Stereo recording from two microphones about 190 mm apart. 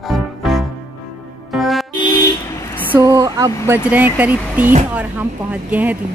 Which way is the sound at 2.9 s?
15° right (ahead or behind).